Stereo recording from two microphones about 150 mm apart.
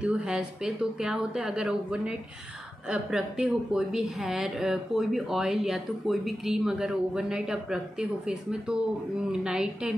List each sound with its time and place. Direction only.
0.0 s speech: 5° right (ahead or behind)